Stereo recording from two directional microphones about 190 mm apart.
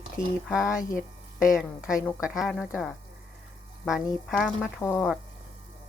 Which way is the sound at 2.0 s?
Centre (ahead or behind).